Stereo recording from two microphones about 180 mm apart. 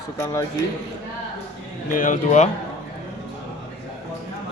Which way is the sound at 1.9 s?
45° left (ahead or behind).